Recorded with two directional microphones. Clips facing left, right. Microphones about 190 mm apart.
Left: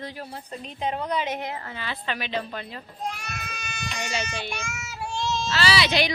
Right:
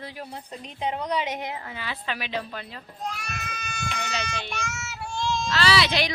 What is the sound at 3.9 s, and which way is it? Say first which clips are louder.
A woman's voice: left 3 dB; 10° left (ahead or behind).